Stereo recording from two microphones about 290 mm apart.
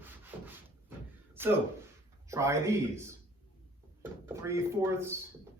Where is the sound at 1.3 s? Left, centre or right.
Centre.